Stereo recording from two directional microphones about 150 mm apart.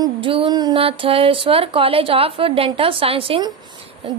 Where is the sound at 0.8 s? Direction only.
40° right (ahead or behind).